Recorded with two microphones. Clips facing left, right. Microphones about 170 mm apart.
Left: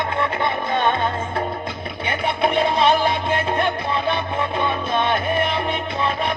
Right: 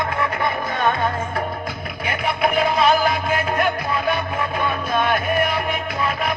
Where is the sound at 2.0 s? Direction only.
30° left (ahead or behind).